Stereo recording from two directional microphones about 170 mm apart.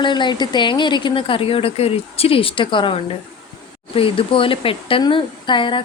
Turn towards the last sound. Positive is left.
turn(degrees=30)  # may be behind; listen again after turning